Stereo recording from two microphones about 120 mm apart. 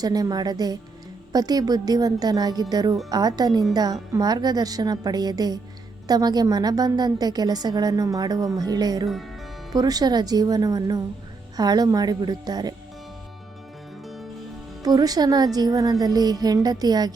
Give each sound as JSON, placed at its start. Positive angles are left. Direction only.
{"t": 0.0, "sound": "a woman's voice", "side_deg": -35}
{"t": 14.8, "sound": "a woman's voice", "side_deg": -30}